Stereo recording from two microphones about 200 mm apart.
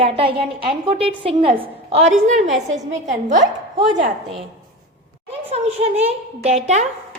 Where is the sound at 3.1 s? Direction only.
35° right (ahead or behind).